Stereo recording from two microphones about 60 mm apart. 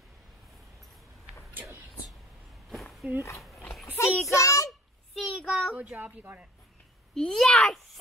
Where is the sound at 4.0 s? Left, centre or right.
Left.